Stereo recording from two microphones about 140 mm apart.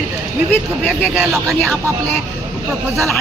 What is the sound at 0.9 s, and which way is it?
Speech, centre (ahead or behind).